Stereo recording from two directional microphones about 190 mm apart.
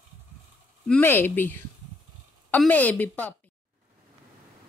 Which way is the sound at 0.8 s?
10° left (ahead or behind).